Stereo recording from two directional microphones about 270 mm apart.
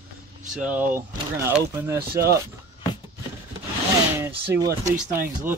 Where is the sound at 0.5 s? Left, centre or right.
Centre.